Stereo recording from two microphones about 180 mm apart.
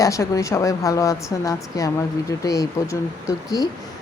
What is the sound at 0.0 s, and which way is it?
Speech, 15° left (ahead or behind).